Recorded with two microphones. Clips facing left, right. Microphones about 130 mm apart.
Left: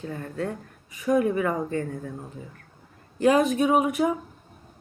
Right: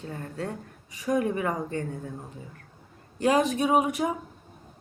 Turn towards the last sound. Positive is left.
turn(degrees=-30)  # may be behind; listen again after turning